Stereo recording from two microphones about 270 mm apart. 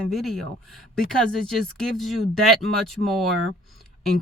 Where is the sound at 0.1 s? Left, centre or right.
Centre.